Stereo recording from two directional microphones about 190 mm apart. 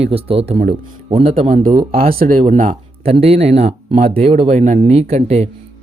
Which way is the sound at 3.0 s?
30° right (ahead or behind).